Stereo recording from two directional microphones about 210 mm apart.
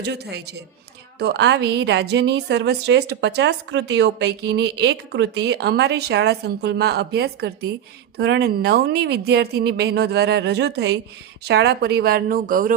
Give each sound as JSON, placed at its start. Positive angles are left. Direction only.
{"t": 0.0, "sound": "a woman's voice", "side_deg": -50}